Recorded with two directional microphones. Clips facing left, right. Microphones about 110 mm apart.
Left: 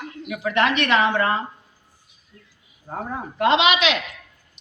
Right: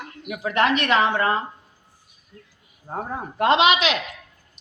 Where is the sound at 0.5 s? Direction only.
40° right (ahead or behind).